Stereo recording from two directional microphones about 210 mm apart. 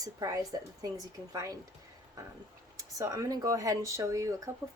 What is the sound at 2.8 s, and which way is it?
Speech, 15° right (ahead or behind).